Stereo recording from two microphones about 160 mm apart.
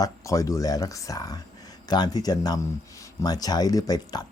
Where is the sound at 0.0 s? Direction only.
20° left (ahead or behind).